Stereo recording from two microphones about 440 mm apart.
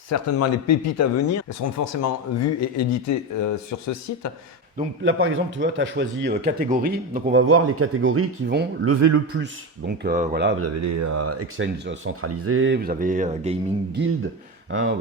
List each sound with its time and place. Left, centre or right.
0.1 s speech: left
5.0 s speech: right
9.4 s speech: right
10.8 s speech: right; by 14.0 s centre
14.7 s speech: right